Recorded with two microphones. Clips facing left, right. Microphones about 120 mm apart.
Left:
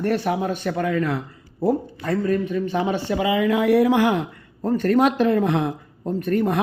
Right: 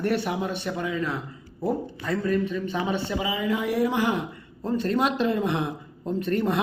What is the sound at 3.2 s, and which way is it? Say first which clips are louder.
Speech: left 11 dB; 70° left (ahead or behind).